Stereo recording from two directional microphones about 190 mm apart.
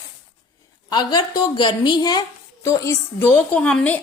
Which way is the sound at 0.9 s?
20° left (ahead or behind).